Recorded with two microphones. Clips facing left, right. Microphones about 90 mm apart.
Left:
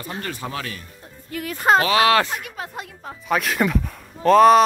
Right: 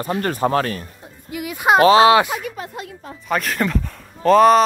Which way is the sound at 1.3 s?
10° right (ahead or behind).